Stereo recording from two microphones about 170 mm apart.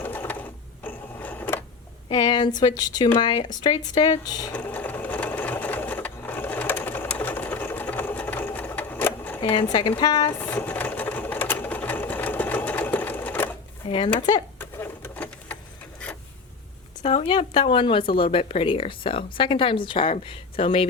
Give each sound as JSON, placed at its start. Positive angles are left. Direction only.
{"t": 0.0, "sound": "mechanisms", "side_deg": 10}
{"t": 0.9, "sound": "a sound", "side_deg": 10}
{"t": 2.0, "sound": "speech", "side_deg": 25}
{"t": 4.5, "sound": "sewing machine", "side_deg": 10}
{"t": 9.4, "sound": "speech", "side_deg": 30}
{"t": 10.5, "sound": "sewing machine", "side_deg": 10}
{"t": 14.6, "sound": "sewing machine", "side_deg": 10}
{"t": 17.0, "sound": "speech", "side_deg": 40}